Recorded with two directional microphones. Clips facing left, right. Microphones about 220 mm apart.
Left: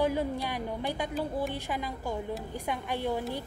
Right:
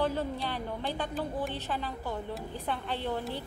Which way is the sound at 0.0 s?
10° left (ahead or behind).